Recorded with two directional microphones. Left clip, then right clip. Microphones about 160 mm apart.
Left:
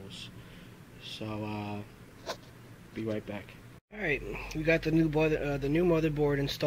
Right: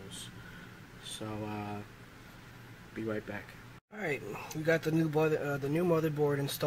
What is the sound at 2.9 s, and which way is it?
Speech, 20° left (ahead or behind).